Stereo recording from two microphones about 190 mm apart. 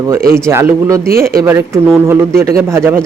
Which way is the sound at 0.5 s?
15° right (ahead or behind).